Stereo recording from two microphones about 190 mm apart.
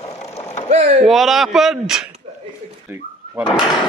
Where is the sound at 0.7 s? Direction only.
35° right (ahead or behind).